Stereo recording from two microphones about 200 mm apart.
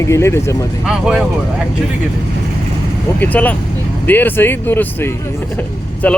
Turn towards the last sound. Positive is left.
turn(degrees=5)  # may be behind; listen again after turning